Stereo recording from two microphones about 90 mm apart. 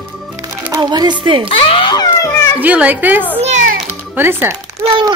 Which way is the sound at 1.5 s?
85° left.